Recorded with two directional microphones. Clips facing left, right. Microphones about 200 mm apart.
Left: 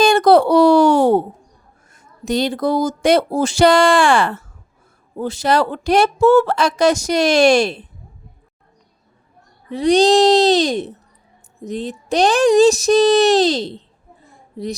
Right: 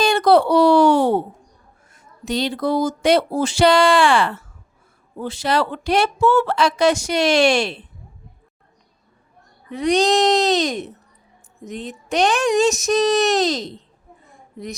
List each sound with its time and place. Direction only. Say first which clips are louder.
0.0 s a sound: left 3 dB; 45° left (ahead or behind)
1.9 s speech: left 4 dB; 45° left (ahead or behind)
9.6 s speech: left 4 dB; 30° left (ahead or behind)